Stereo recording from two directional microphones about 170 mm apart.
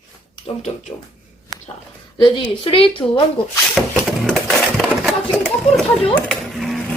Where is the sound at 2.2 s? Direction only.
30° left (ahead or behind).